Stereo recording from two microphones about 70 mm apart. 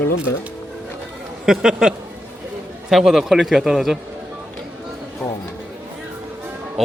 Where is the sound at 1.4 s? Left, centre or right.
Centre.